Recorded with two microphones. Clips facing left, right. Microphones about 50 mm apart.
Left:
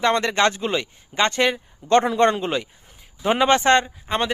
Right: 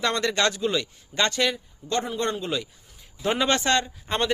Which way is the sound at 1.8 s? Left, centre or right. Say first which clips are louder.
Left 12 dB; left.